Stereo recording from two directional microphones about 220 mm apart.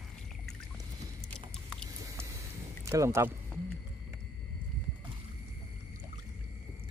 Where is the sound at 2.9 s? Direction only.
10° right (ahead or behind).